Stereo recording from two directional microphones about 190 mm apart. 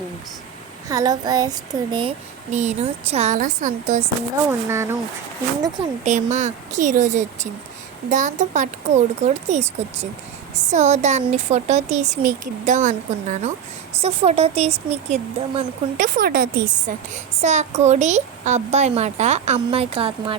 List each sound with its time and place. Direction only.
0.9 s speech: 20° right (ahead or behind); by 4.0 s 40° right (ahead or behind)
4.4 s speech: 15° right (ahead or behind)
6.1 s speech: 40° right (ahead or behind)
16.1 s a woman's voice: 50° right (ahead or behind)
17.4 s speech: 40° right (ahead or behind)